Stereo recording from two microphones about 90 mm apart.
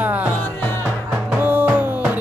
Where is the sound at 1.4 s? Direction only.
20° right (ahead or behind).